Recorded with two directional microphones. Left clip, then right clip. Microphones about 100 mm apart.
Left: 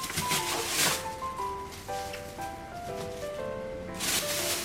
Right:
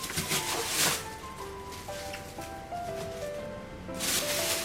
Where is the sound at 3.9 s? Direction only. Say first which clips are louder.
Even; 15° left (ahead or behind).